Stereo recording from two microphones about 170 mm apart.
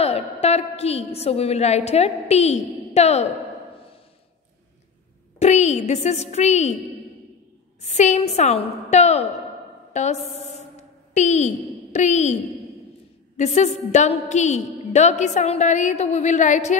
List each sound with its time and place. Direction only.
0.0 s a woman's voice: 40° left (ahead or behind)
5.4 s a woman's voice: 40° left (ahead or behind)
7.8 s a woman's voice: 40° left (ahead or behind)
13.4 s a woman's voice: 45° left (ahead or behind)